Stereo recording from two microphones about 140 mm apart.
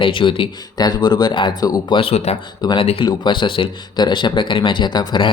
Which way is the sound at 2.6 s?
40° left (ahead or behind).